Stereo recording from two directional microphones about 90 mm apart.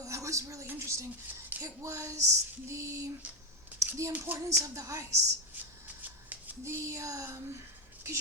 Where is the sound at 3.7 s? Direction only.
20° right (ahead or behind).